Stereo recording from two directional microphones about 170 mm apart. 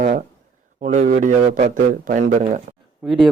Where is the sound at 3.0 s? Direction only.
5° right (ahead or behind).